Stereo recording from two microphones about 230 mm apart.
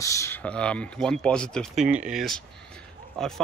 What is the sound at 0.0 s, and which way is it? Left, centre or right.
Speech, centre.